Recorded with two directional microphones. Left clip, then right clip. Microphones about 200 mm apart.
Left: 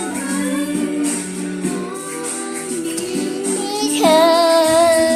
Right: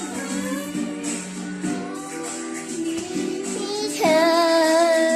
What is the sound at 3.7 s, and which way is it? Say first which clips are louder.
Music: left 5 dB; 15° right (ahead or behind).